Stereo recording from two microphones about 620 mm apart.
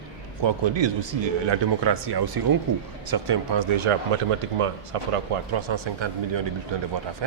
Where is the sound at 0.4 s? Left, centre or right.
Right.